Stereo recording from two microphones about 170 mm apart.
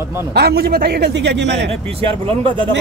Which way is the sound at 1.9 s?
30° right (ahead or behind).